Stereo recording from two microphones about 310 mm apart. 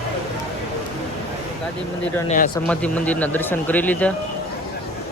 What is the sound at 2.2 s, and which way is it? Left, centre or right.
Speech, left.